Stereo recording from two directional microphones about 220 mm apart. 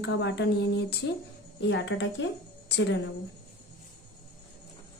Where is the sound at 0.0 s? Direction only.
50° left (ahead or behind).